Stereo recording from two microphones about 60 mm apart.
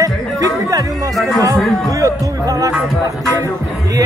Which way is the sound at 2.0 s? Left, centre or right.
Right.